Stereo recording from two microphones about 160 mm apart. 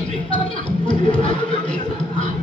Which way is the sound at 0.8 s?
30° left (ahead or behind).